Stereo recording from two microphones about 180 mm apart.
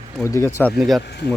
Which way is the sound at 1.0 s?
65° left (ahead or behind).